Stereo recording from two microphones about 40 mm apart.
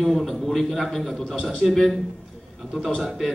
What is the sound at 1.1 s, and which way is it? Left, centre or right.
Speech, left.